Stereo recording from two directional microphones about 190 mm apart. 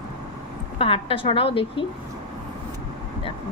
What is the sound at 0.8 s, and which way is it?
A woman's voice, 30° left (ahead or behind).